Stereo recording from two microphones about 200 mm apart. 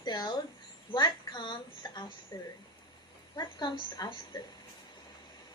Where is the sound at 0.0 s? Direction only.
20° left (ahead or behind).